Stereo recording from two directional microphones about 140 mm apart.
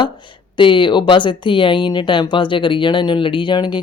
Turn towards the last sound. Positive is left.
turn(degrees=35)  # may be behind; listen again after turning